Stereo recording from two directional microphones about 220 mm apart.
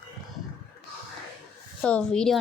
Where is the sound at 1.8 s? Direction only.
5° left (ahead or behind).